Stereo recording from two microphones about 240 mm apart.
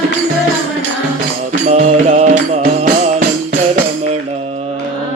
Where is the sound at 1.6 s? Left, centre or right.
Right.